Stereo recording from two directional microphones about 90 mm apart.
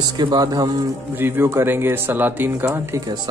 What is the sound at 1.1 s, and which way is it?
Speech, 25° right (ahead or behind).